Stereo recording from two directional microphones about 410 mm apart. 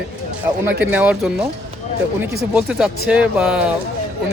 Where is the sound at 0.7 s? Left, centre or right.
Centre.